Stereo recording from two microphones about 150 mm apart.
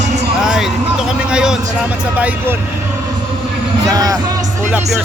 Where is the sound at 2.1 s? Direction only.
10° right (ahead or behind).